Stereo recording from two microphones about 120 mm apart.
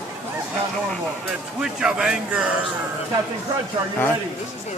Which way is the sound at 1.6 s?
5° right (ahead or behind).